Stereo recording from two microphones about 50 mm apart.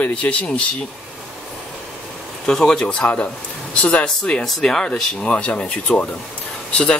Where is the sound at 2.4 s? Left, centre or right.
Centre.